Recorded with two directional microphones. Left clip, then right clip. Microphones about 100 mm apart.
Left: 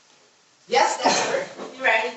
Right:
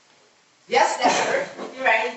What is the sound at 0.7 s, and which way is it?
Speech, 30° right (ahead or behind).